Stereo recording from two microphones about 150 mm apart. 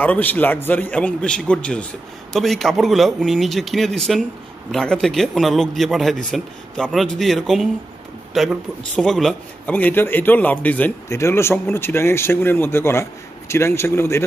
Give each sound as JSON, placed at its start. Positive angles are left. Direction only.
{"t": 0.0, "sound": "a man's voice", "side_deg": 10}
{"t": 9.8, "sound": "a man's voice", "side_deg": 15}